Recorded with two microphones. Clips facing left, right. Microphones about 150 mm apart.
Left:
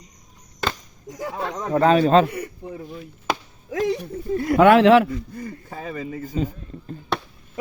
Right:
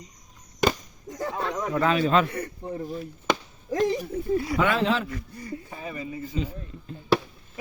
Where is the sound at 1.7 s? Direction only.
40° left (ahead or behind).